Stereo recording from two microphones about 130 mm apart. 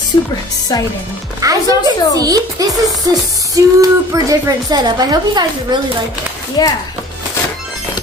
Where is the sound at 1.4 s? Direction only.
25° right (ahead or behind).